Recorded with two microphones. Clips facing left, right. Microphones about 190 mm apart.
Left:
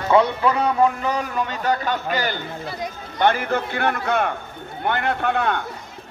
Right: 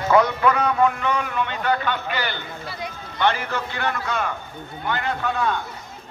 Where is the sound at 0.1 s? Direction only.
30° left (ahead or behind).